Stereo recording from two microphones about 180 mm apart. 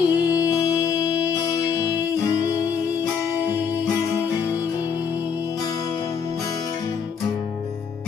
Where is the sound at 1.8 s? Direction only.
10° right (ahead or behind).